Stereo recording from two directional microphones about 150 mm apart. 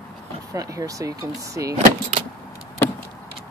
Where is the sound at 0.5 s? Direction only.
20° right (ahead or behind).